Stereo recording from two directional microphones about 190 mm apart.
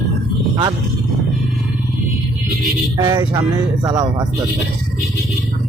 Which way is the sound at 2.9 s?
20° right (ahead or behind).